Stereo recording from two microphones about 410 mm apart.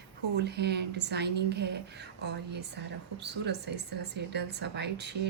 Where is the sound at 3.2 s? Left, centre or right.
Right.